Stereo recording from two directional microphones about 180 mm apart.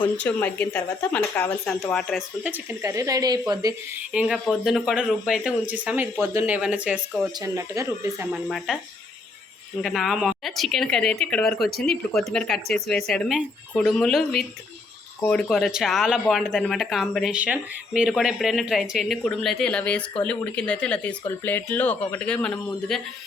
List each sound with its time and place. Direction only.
0.2 s speech: 10° left (ahead or behind)
2.4 s speech: 10° right (ahead or behind)
4.1 s speech: 5° right (ahead or behind)
7.3 s speech: 15° right (ahead or behind)
8.4 s speech: centre (ahead or behind)
9.8 s speech: centre (ahead or behind)